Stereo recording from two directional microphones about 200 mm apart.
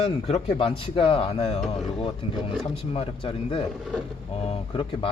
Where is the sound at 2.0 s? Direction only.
30° left (ahead or behind).